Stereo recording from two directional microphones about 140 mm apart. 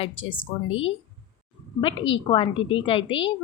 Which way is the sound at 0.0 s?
40° left (ahead or behind).